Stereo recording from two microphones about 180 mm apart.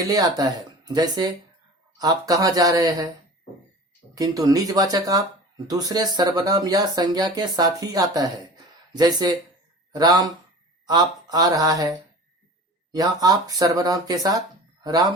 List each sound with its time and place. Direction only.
0.0 s speech: 20° right (ahead or behind)
4.1 s speech: 20° right (ahead or behind)
13.0 s speech: 20° right (ahead or behind)